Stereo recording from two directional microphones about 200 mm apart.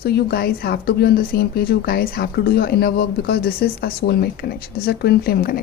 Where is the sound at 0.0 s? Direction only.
50° left (ahead or behind).